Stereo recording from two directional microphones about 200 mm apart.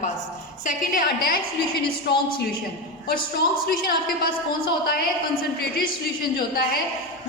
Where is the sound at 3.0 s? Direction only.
50° left (ahead or behind).